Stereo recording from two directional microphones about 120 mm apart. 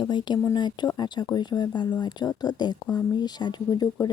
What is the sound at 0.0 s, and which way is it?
Speech, 40° left (ahead or behind).